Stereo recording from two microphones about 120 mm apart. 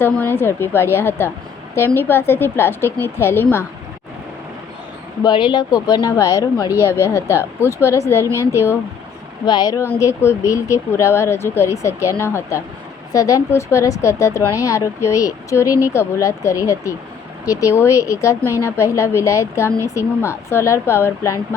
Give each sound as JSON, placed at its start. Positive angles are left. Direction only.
{"t": 0.0, "sound": "a woman's voice", "side_deg": 20}
{"t": 5.2, "sound": "a woman's voice", "side_deg": 40}
{"t": 9.5, "sound": "speech", "side_deg": 35}
{"t": 10.0, "sound": "a woman's voice", "side_deg": 25}